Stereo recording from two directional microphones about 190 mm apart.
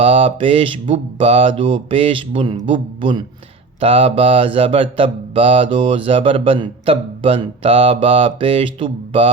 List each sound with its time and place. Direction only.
0.0 s mantra: 30° right (ahead or behind)